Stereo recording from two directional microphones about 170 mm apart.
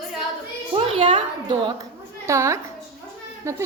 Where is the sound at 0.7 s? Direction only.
30° right (ahead or behind).